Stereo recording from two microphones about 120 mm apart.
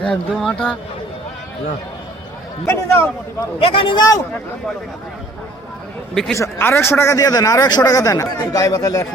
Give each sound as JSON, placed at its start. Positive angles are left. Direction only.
{"t": 0.0, "sound": "speech", "side_deg": 5}
{"t": 2.6, "sound": "a man's voice", "side_deg": 25}
{"t": 3.6, "sound": "speech", "side_deg": 50}
{"t": 6.3, "sound": "a man's voice", "side_deg": 20}